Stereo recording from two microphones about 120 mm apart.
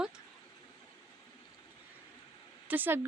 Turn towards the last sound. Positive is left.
turn(degrees=-15)  # may be behind; listen again after turning